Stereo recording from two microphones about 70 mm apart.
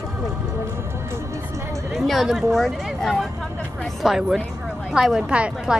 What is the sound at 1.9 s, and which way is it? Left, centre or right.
Speech, centre.